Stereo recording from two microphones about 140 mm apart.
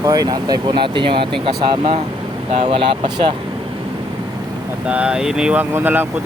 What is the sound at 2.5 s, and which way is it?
Speech, 50° right (ahead or behind).